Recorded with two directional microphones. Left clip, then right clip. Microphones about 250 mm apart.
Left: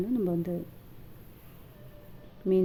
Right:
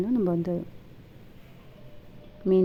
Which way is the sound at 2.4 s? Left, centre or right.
Centre.